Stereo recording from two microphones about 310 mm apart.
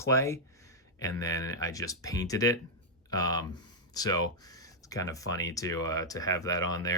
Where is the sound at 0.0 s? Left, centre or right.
Centre.